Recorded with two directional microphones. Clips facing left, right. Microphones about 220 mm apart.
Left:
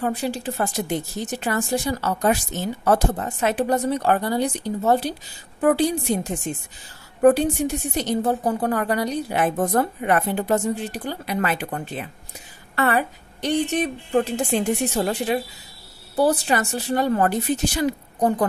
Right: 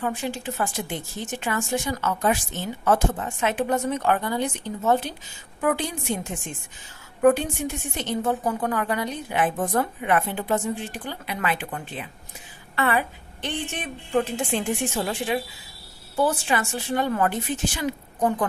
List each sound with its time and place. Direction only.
0.0 s a woman's voice: 35° left (ahead or behind)